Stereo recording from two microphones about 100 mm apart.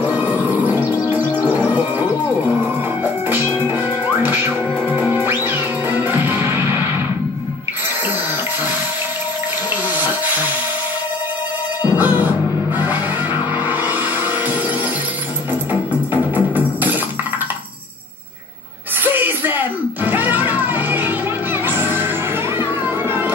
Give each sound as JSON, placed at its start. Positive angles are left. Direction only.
{"t": 0.0, "sound": "music", "side_deg": -20}
{"t": 9.9, "sound": "music", "side_deg": -20}
{"t": 11.8, "sound": "music", "side_deg": -15}
{"t": 15.7, "sound": "music", "side_deg": -15}
{"t": 19.0, "sound": "music", "side_deg": -20}